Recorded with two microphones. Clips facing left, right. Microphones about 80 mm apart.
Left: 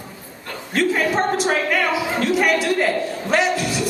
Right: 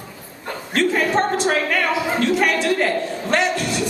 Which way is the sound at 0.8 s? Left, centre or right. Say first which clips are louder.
Right 1 dB; centre.